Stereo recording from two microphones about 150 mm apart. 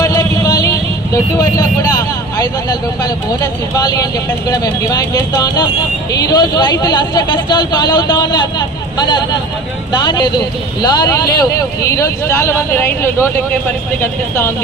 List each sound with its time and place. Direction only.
0.0 s vehicle: 25° left (ahead or behind)
2.4 s speech: 25° left (ahead or behind)
9.9 s speech: 30° left (ahead or behind)